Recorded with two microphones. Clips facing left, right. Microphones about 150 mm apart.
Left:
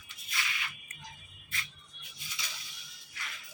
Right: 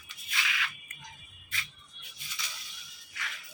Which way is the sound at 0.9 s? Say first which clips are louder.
Left 1 dB; 30° left (ahead or behind).